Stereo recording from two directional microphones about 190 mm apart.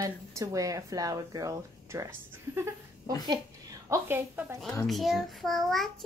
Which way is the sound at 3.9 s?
10° right (ahead or behind).